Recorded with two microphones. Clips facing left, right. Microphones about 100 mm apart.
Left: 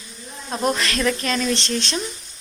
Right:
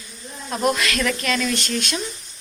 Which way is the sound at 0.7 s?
35° left (ahead or behind).